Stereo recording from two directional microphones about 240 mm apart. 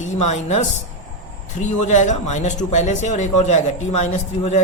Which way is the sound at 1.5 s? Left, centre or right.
Left.